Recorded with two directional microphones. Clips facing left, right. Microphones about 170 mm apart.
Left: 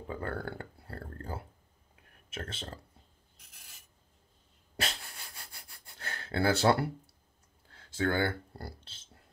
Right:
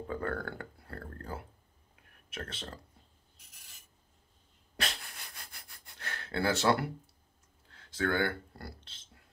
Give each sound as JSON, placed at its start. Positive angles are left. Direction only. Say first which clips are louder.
{"t": 0.1, "sound": "a sound", "louder": "even", "side_deg": 30}
{"t": 2.3, "sound": "speech", "louder": "left 1 dB", "side_deg": 30}
{"t": 4.7, "sound": "sniff", "louder": "left 1 dB", "side_deg": 30}
{"t": 7.9, "sound": "speech", "louder": "left 1 dB", "side_deg": 25}